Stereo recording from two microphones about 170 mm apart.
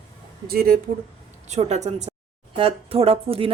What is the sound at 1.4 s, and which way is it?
Speech, 40° right (ahead or behind).